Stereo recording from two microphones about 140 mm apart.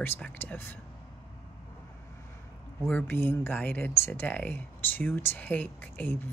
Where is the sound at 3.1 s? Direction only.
15° left (ahead or behind).